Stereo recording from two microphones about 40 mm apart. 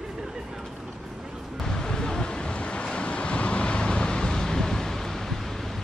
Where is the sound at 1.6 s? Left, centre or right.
Centre.